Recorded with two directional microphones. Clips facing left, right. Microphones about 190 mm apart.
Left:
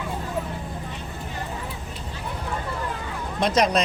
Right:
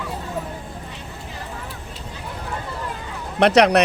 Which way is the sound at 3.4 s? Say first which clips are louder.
Right 6 dB; 70° right (ahead or behind).